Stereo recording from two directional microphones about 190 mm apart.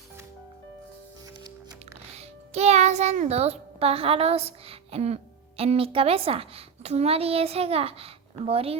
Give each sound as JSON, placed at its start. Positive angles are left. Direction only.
{"t": 2.1, "sound": "a child's voice", "side_deg": -35}